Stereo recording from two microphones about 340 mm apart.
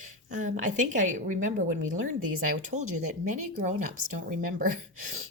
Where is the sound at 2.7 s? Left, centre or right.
Right.